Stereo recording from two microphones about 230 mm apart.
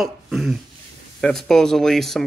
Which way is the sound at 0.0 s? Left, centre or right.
Centre.